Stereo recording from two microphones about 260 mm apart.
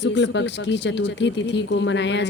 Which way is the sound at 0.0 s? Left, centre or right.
Left.